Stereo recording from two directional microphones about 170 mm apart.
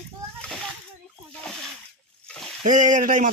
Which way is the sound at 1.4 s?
Centre (ahead or behind).